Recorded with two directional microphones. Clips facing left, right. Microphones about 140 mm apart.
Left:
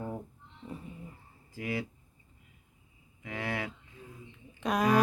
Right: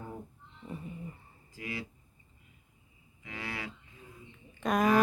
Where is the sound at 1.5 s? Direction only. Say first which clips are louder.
Left 6 dB; 55° left (ahead or behind).